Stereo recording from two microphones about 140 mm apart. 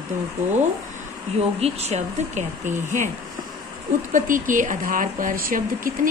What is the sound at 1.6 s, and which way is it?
Speech, 50° right (ahead or behind).